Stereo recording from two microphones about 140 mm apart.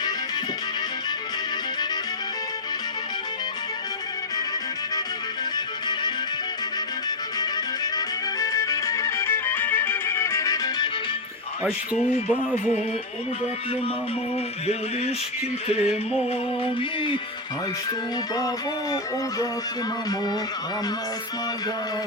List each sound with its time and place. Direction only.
7.9 s music: 25° left (ahead or behind)
15.6 s music: 45° left (ahead or behind)
18.3 s music: 25° left (ahead or behind)